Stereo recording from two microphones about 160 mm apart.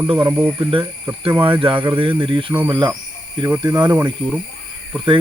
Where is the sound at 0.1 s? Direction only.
35° right (ahead or behind).